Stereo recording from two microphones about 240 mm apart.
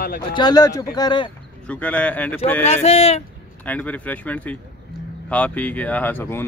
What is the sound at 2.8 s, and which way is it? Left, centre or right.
Speech, left.